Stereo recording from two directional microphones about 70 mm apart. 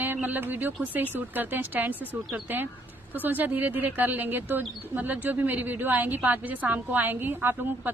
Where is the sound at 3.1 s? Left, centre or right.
Right.